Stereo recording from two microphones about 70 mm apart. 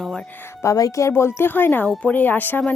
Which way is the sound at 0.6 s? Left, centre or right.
Left.